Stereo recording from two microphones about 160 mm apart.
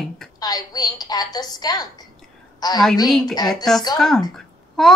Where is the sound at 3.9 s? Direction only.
5° left (ahead or behind).